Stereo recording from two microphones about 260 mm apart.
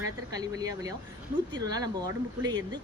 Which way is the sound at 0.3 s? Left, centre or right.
Centre.